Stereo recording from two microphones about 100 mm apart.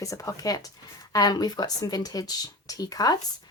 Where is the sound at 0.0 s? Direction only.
35° left (ahead or behind).